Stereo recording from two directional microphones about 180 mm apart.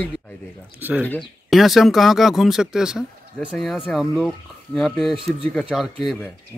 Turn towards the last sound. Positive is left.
turn(degrees=-5)  # may be behind; listen again after turning